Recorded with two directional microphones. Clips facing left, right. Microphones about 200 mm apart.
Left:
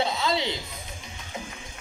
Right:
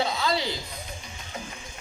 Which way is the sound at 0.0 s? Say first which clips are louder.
Even; 25° left (ahead or behind).